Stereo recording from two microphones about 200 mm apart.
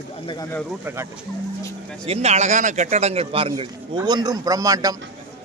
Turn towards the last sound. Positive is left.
turn(degrees=-15)  # may be behind; listen again after turning